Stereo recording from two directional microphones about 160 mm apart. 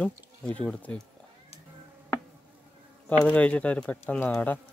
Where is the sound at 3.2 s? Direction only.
10° left (ahead or behind).